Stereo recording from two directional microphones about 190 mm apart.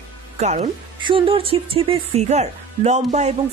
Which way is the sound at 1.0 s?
25° right (ahead or behind).